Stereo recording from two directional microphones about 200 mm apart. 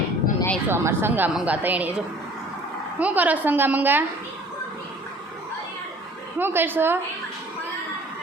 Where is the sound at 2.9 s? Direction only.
10° right (ahead or behind).